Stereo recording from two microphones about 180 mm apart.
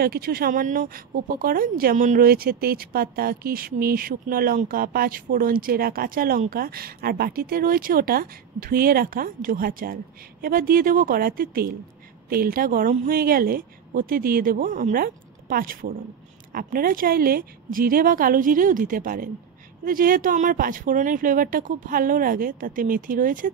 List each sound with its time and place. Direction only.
0.0 s speech: 55° right (ahead or behind)